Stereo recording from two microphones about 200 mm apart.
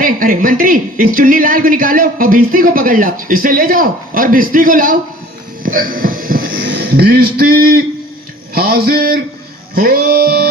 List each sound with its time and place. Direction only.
0.0 s speech: 45° right (ahead or behind)
5.6 s a sound: 45° right (ahead or behind)
6.7 s speech: 55° right (ahead or behind)
9.7 s music: 50° right (ahead or behind)